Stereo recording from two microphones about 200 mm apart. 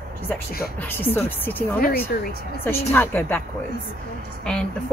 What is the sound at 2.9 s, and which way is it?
Speech, 10° left (ahead or behind).